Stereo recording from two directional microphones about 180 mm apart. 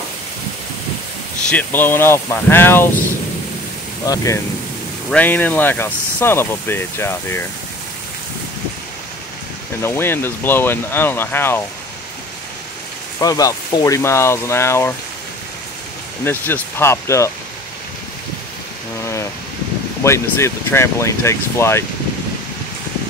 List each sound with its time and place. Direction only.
1.5 s speech: 10° left (ahead or behind)
4.0 s speech: 20° left (ahead or behind)
9.8 s speech: 15° left (ahead or behind)
13.2 s speech: 20° left (ahead or behind)
16.3 s speech: 10° left (ahead or behind)
20.0 s speech: 15° left (ahead or behind)